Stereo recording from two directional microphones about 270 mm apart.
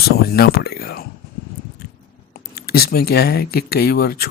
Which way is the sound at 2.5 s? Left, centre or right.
Left.